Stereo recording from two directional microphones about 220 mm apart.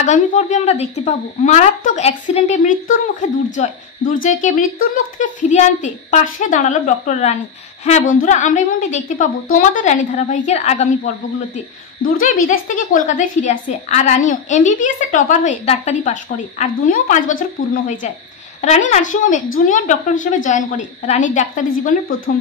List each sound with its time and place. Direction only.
0.0 s a woman's voice: 35° left (ahead or behind)
12.4 s a woman's voice: 35° left (ahead or behind)